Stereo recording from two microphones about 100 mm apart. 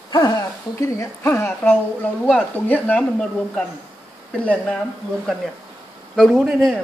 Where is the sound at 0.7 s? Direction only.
30° left (ahead or behind); by 3.6 s 10° left (ahead or behind).